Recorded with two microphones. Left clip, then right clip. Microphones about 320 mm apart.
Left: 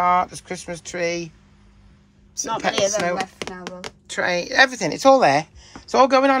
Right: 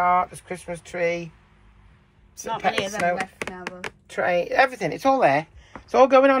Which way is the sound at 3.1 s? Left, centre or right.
Left.